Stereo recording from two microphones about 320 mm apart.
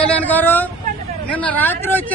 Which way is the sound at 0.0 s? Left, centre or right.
Centre.